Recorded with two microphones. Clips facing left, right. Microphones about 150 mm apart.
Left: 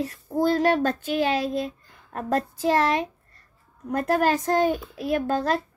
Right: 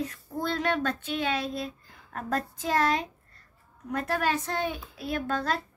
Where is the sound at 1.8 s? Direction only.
45° left (ahead or behind).